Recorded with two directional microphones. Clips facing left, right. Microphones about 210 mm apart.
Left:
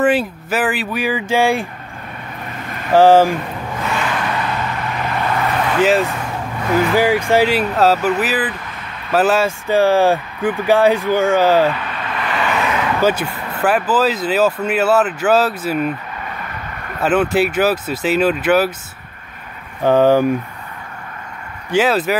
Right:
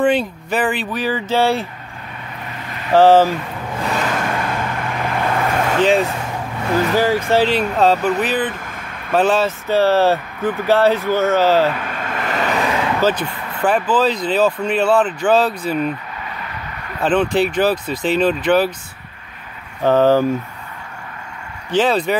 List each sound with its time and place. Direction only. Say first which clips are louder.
0.0 s speech: left 1 dB; 5° left (ahead or behind)
2.9 s speech: left 1 dB; 10° left (ahead or behind)
3.8 s vehicle: right 1 dB; 40° right (ahead or behind)
5.8 s speech: left 1 dB; 5° left (ahead or behind)
11.7 s vehicle: even; 45° right (ahead or behind); by 12.9 s 30° right (ahead or behind)
13.0 s speech: left 1 dB; 10° left (ahead or behind)
17.0 s speech: left 1 dB; 5° left (ahead or behind)
19.8 s speech: left 1 dB; 15° left (ahead or behind)
21.6 s speech: left 1 dB; 10° left (ahead or behind)